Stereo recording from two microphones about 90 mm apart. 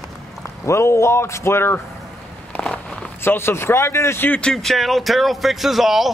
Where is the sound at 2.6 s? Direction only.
10° left (ahead or behind).